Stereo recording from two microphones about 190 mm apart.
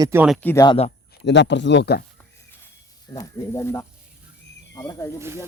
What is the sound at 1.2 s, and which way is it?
Speech, 65° left (ahead or behind).